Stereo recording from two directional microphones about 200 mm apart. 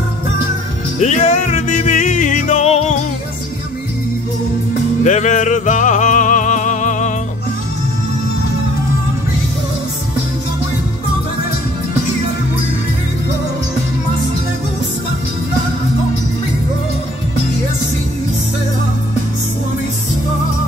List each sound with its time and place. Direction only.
0.9 s music: 35° left (ahead or behind)
5.0 s music: 40° left (ahead or behind)